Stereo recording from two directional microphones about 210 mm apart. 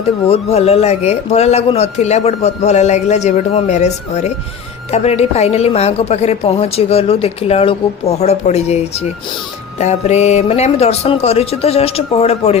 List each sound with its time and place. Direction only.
0.3 s a woman's voice: 30° left (ahead or behind)